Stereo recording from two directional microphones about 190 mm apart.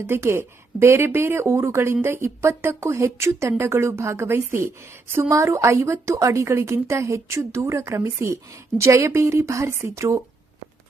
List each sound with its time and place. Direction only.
0.1 s speech: 15° right (ahead or behind)